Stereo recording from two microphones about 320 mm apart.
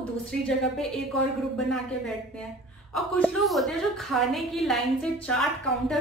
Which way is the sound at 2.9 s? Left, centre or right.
Centre.